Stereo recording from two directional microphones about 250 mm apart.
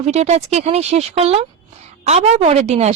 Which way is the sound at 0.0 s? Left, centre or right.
Right.